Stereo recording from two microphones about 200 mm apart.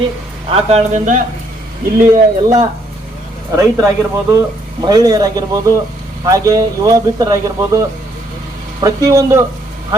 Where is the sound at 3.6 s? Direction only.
15° right (ahead or behind).